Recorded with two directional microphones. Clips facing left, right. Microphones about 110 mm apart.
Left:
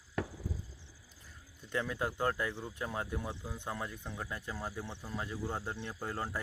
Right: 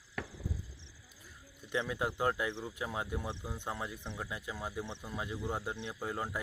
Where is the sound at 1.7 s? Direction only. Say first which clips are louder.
Right 1 dB; 15° right (ahead or behind).